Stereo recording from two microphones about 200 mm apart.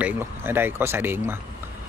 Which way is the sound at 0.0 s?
10° right (ahead or behind).